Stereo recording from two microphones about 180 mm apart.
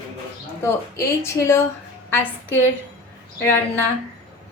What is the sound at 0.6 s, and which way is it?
Speech, 15° left (ahead or behind).